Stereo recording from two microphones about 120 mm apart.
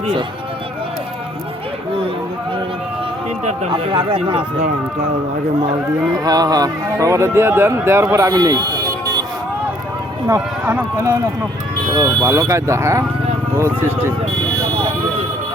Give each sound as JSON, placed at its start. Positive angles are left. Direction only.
{"t": 3.7, "sound": "speech", "side_deg": -45}
{"t": 6.1, "sound": "speech", "side_deg": -30}
{"t": 10.2, "sound": "speech", "side_deg": -25}